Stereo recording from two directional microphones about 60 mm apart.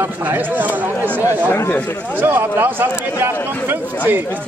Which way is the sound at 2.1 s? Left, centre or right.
Right.